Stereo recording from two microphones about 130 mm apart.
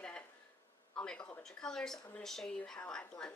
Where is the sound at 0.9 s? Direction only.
5° left (ahead or behind).